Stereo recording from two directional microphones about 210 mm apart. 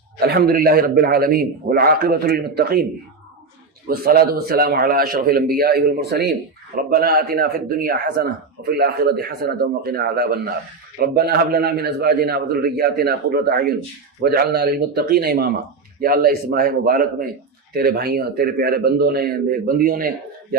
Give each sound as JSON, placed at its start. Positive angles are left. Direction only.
{"t": 0.2, "sound": "a man's voice", "side_deg": -50}
{"t": 3.8, "sound": "a man's voice", "side_deg": -45}